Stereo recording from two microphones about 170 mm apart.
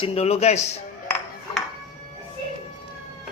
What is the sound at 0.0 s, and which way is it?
Speech, 35° left (ahead or behind).